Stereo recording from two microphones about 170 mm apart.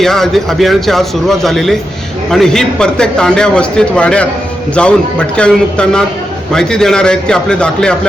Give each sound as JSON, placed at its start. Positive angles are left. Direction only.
{"t": 0.0, "sound": "a man's voice", "side_deg": 0}